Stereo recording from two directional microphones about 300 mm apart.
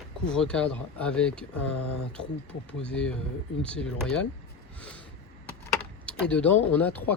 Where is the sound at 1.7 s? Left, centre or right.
Left.